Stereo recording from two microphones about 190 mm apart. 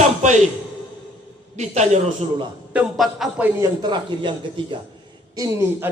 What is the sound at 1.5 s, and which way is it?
Speech, 35° right (ahead or behind).